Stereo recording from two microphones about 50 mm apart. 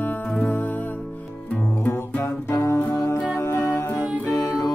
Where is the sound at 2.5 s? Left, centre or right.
Left.